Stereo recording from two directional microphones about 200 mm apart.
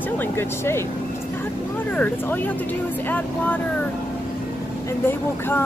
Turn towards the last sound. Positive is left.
turn(degrees=10)  # may be behind; listen again after turning